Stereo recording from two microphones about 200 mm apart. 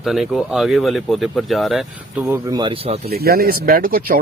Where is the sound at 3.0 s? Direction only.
50° right (ahead or behind).